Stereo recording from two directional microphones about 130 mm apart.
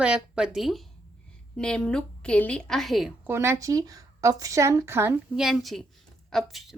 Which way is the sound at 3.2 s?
20° right (ahead or behind).